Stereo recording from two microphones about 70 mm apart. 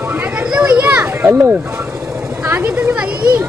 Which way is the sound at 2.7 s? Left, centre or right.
Centre.